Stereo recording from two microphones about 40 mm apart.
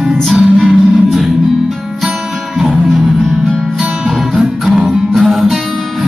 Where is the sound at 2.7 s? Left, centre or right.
Centre.